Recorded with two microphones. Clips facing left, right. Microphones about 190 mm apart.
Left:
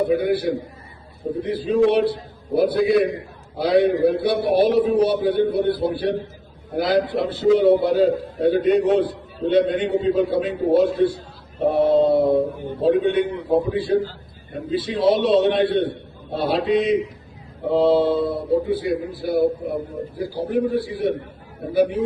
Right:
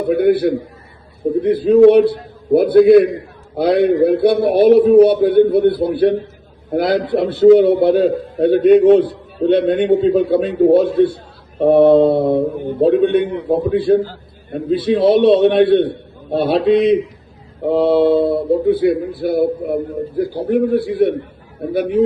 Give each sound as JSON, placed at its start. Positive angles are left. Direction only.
{"t": 0.1, "sound": "a man's voice", "side_deg": -55}